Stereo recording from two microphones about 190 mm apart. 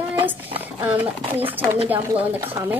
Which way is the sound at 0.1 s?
25° right (ahead or behind).